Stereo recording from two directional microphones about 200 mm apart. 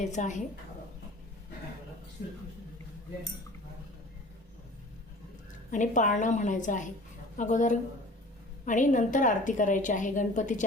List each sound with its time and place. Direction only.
0.0 s a woman's voice: 35° left (ahead or behind)
5.7 s a woman's voice: 40° left (ahead or behind)